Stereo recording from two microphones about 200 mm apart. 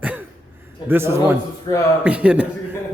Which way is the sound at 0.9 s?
10° right (ahead or behind).